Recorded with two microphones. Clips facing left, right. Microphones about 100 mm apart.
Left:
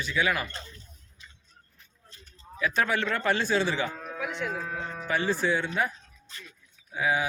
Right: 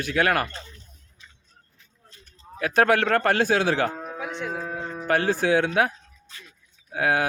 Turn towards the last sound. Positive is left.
turn(degrees=-65)  # may be behind; listen again after turning